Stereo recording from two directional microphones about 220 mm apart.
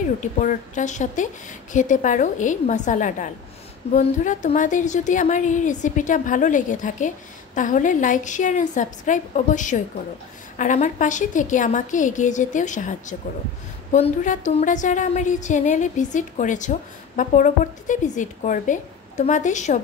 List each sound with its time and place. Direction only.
0.2 s a woman's voice: 35° left (ahead or behind)